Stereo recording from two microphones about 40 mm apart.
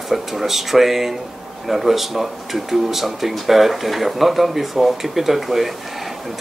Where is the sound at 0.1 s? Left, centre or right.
Centre.